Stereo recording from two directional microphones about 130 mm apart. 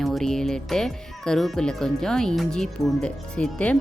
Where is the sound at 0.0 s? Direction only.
Centre (ahead or behind).